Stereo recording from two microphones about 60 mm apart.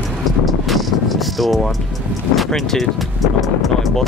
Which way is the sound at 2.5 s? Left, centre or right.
Centre.